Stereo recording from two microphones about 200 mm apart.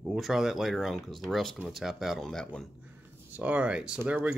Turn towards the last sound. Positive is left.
turn(degrees=-10)  # may be behind; listen again after turning